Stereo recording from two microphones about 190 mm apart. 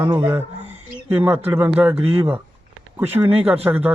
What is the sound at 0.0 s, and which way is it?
Speech, 10° right (ahead or behind).